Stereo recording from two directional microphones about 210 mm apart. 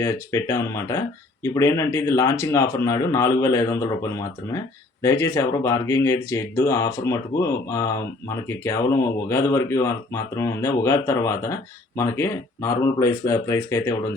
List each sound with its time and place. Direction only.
0.0 s speech: 15° left (ahead or behind)
8.4 s speech: 10° left (ahead or behind)